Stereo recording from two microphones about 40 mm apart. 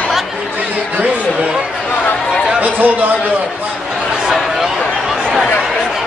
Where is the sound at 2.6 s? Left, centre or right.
Right.